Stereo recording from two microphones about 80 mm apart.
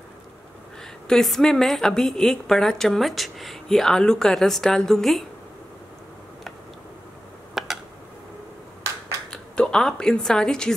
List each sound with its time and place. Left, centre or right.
1.0 s a woman's voice: centre
7.5 s a sound: centre
9.3 s speech: centre